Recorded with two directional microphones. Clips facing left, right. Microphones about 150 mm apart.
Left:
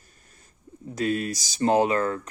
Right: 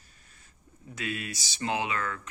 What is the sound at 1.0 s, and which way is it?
Speech, 40° left (ahead or behind).